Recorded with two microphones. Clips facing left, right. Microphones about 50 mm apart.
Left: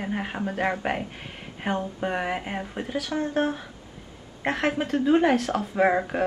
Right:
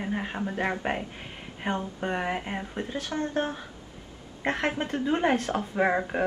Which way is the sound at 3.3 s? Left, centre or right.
Left.